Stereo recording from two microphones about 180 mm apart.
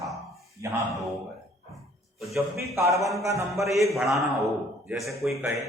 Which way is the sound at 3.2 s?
15° right (ahead or behind).